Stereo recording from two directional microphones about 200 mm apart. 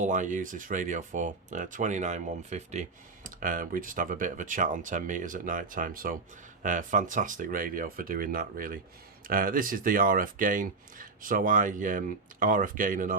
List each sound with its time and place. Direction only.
0.0 s speech: 40° right (ahead or behind)